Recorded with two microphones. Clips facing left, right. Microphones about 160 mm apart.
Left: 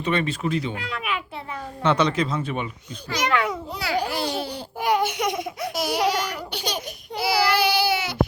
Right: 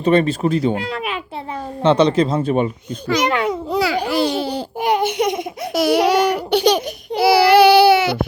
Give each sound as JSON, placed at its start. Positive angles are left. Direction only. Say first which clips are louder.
{"t": 0.0, "sound": "speech", "louder": "right 9 dB", "side_deg": -35}
{"t": 3.2, "sound": "a child's voice", "louder": "even", "side_deg": -25}
{"t": 3.7, "sound": "babbling", "louder": "right 7 dB", "side_deg": -90}
{"t": 4.8, "sound": "baby laughter", "louder": "right 4 dB", "side_deg": -25}
{"t": 5.7, "sound": "laughter", "louder": "right 9 dB", "side_deg": -70}
{"t": 7.2, "sound": "baby cry", "louder": "right 10 dB", "side_deg": -75}